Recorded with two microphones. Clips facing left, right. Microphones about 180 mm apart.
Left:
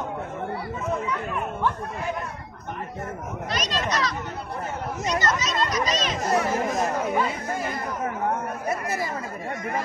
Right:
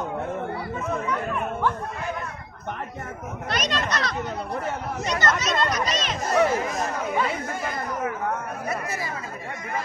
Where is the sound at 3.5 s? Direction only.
60° right (ahead or behind).